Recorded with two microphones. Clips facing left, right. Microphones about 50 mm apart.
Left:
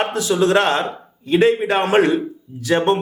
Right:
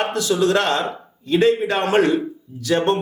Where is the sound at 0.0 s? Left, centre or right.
Left.